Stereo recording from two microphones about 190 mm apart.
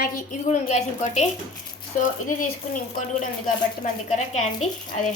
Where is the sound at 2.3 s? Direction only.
45° left (ahead or behind).